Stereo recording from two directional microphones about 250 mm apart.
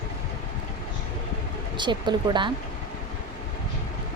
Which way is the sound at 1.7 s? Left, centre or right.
Centre.